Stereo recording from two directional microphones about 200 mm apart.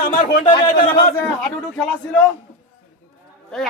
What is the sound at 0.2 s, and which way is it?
Speech, 25° left (ahead or behind).